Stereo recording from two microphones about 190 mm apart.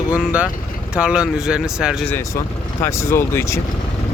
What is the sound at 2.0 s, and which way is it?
Speech, 15° left (ahead or behind).